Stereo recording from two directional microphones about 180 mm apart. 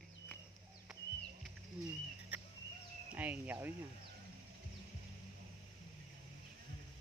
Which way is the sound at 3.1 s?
10° right (ahead or behind).